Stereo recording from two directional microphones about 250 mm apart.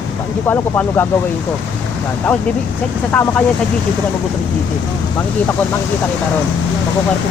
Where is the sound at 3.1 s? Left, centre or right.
Centre.